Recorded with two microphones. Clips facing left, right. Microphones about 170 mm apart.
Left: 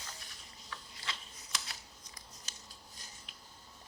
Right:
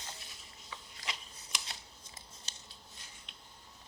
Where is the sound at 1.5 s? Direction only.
25° right (ahead or behind).